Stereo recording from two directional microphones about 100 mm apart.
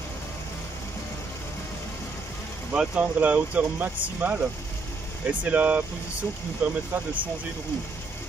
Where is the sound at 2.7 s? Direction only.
15° right (ahead or behind).